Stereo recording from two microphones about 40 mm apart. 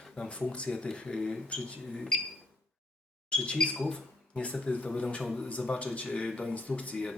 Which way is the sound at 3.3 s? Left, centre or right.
Left.